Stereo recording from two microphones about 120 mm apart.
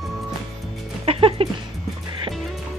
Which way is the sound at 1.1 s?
50° right (ahead or behind).